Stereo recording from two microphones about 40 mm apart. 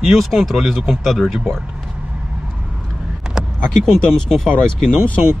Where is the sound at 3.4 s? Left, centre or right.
Centre.